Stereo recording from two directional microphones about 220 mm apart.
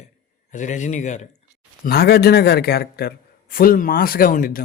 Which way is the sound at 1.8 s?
45° left (ahead or behind).